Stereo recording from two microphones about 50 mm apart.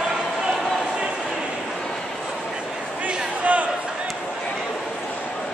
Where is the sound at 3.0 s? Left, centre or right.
Right.